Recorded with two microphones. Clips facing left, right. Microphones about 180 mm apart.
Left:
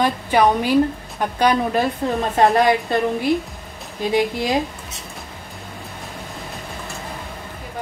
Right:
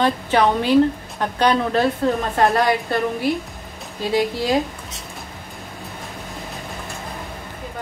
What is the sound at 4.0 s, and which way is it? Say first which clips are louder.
Speech: left 1 dB; 20° left (ahead or behind).